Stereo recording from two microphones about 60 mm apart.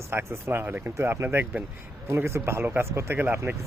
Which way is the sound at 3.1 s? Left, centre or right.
Right.